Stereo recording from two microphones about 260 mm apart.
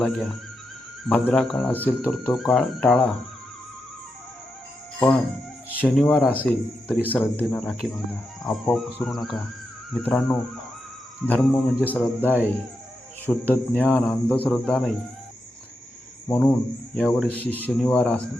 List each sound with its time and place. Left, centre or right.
0.0 s speech: centre
5.7 s speech: centre
13.5 s speech: centre
16.3 s speech: centre